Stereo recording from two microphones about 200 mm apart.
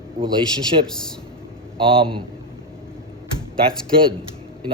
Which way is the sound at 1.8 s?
25° right (ahead or behind).